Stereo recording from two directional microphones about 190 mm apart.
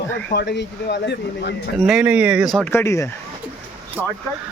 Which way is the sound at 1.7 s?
Centre (ahead or behind).